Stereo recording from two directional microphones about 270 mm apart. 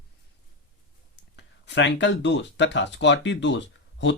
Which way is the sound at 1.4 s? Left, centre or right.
Left.